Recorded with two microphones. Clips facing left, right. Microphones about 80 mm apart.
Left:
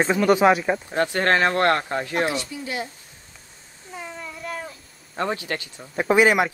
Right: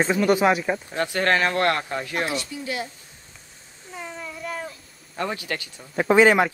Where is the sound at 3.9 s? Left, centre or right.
Centre.